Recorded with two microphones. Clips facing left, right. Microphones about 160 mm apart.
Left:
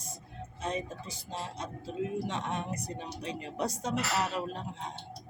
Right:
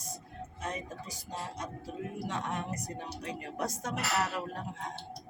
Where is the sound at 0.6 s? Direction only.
20° left (ahead or behind).